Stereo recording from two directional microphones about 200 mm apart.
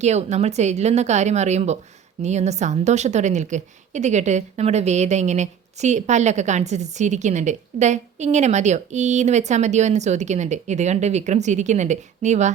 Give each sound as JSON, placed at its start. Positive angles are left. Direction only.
{"t": 0.0, "sound": "a woman's voice", "side_deg": -35}